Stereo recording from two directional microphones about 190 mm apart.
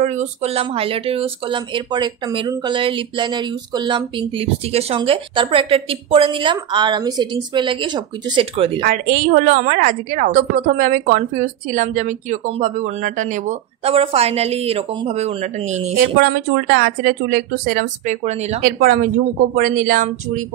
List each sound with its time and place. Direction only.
0.0 s speech: 40° right (ahead or behind)
8.8 s a woman's voice: 50° right (ahead or behind)
16.2 s a woman's voice: 60° right (ahead or behind); by 18.6 s 35° right (ahead or behind)
18.6 s a woman's voice: 50° right (ahead or behind)